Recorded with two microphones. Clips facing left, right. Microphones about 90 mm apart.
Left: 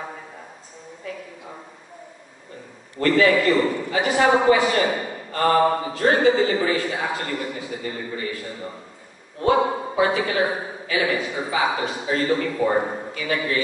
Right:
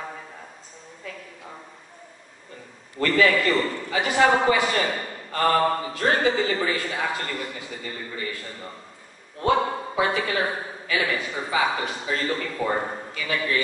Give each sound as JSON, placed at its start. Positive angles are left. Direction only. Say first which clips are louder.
{"t": 3.0, "sound": "a man's voice", "louder": "left 3 dB", "side_deg": 15}
{"t": 9.4, "sound": "a man's voice", "louder": "left 3 dB", "side_deg": 15}